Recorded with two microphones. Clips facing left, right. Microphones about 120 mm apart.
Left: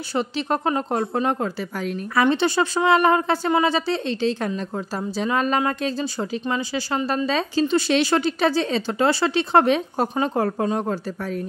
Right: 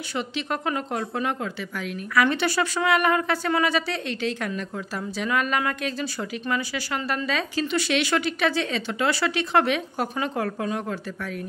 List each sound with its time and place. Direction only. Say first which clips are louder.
0.1 s a woman's voice: left 5 dB; 35° left (ahead or behind)